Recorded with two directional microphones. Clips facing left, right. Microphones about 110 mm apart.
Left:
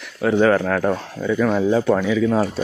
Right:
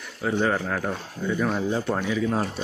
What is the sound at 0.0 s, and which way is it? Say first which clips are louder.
Speech: left 8 dB; 75° left (ahead or behind).